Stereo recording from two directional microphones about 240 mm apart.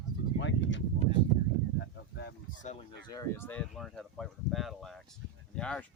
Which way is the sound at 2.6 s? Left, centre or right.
Left.